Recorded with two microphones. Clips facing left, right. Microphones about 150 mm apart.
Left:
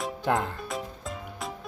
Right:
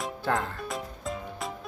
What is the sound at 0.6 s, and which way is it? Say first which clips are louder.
Music: right 1 dB; centre (ahead or behind).